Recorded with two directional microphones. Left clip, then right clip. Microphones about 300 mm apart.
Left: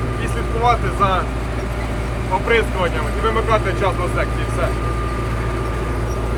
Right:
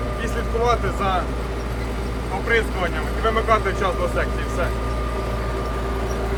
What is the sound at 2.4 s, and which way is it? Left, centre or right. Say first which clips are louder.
Speech: left 2 dB; centre.